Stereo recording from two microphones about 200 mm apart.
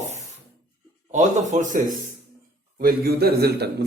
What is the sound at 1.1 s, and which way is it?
Speech, 35° right (ahead or behind).